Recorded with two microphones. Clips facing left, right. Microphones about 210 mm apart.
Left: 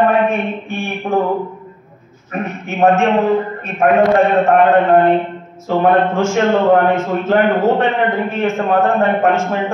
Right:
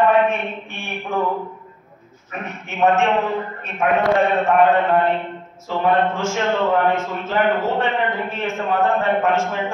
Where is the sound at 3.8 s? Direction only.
60° left (ahead or behind).